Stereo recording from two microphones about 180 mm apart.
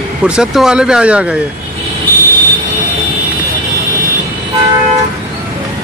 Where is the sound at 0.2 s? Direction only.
5° right (ahead or behind).